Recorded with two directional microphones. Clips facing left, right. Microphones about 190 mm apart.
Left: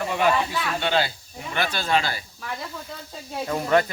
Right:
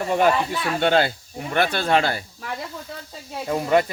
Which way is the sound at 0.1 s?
45° right (ahead or behind).